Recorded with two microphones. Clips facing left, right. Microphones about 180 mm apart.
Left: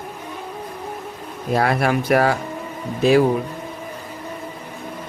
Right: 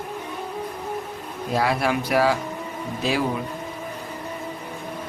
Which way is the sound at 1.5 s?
55° left (ahead or behind).